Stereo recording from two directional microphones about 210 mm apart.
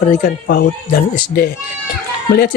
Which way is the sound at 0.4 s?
50° left (ahead or behind).